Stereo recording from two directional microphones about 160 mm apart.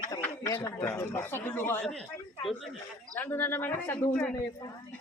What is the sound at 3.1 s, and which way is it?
A woman's voice, 10° left (ahead or behind).